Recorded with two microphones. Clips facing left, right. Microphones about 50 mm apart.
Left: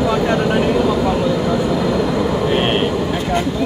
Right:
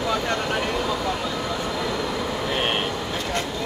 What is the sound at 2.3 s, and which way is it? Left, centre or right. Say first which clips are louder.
Vehicle: left 8 dB; left.